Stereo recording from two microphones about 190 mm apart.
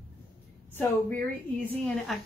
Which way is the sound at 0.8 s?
10° left (ahead or behind).